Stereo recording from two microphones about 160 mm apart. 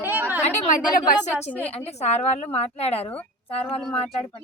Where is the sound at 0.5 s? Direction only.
55° left (ahead or behind).